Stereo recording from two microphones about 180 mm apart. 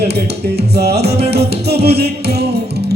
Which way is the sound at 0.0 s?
65° right (ahead or behind).